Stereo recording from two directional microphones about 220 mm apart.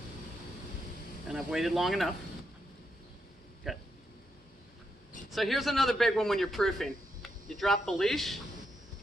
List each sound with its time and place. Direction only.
1.3 s a man's voice: 5° right (ahead or behind)
3.6 s a man's voice: centre (ahead or behind)
5.3 s a man's voice: centre (ahead or behind)